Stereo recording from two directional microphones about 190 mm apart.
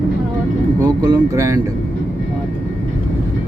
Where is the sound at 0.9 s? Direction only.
20° right (ahead or behind).